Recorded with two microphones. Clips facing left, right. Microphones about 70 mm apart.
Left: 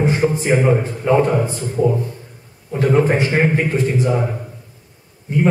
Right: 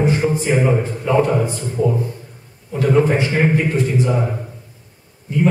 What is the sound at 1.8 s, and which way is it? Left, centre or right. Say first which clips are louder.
A man's voice: left 2 dB; left.